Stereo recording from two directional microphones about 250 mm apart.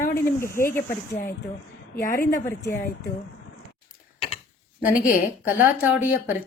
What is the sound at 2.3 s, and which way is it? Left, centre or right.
Speech, centre.